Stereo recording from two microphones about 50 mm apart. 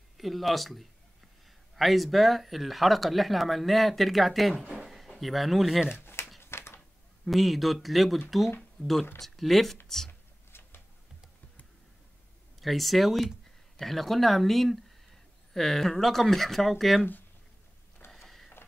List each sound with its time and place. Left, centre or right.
0.2 s speech: centre
4.8 s a sound: centre
5.2 s speech: centre
5.9 s a sound: left
7.2 s speech: centre
8.8 s speech: left
9.2 s speech: centre
10.5 s a sound: left
12.5 s speech: centre
18.0 s mechanisms: left